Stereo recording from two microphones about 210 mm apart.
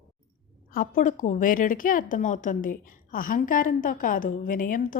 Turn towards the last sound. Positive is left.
turn(degrees=40)  # may be behind; listen again after turning